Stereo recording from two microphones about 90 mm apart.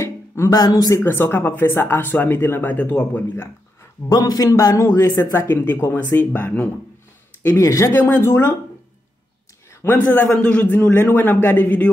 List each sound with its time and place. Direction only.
0.0 s a sound: 30° left (ahead or behind)
0.6 s a man's voice: 45° left (ahead or behind)
1.0 s speech: 25° left (ahead or behind)
4.1 s a man's voice: 45° left (ahead or behind); by 6.7 s 15° left (ahead or behind)
7.4 s a man's voice: 35° left (ahead or behind)
7.9 s speech: 25° left (ahead or behind)
9.7 s a sound: 30° left (ahead or behind)
9.9 s a man's voice: 20° left (ahead or behind)